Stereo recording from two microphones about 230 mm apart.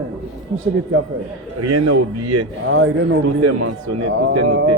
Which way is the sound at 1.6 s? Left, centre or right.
Right.